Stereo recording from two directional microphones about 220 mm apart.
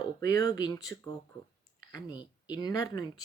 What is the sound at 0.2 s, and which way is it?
A woman's voice, 15° left (ahead or behind).